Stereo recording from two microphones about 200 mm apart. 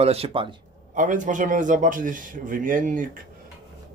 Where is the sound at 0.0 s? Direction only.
30° right (ahead or behind).